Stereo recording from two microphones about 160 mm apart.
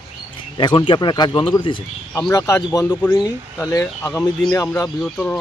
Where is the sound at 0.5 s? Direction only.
30° left (ahead or behind).